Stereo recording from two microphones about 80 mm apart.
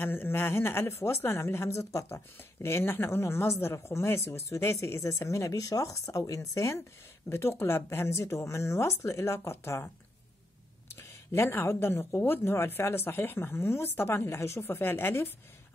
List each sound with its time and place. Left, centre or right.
0.0 s a woman's voice: left
10.9 s a woman's voice: left